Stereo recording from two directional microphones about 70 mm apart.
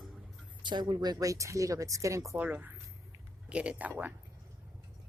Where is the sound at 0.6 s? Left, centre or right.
Right.